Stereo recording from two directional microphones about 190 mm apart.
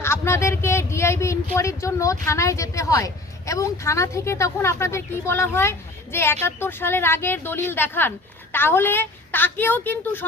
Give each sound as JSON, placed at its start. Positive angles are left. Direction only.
{"t": 0.0, "sound": "a woman's voice", "side_deg": 15}